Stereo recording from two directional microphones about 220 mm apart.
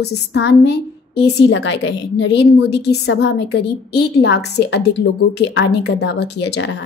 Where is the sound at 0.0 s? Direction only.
50° left (ahead or behind).